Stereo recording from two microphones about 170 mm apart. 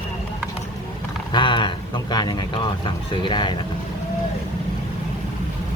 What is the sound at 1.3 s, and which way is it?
Speech, 30° left (ahead or behind).